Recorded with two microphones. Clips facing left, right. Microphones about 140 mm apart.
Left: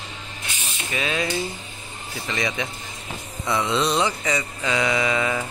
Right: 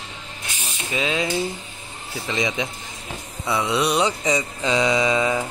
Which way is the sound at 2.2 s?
20° right (ahead or behind).